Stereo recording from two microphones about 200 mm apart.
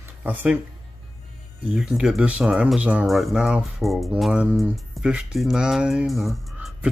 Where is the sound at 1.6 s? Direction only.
5° right (ahead or behind).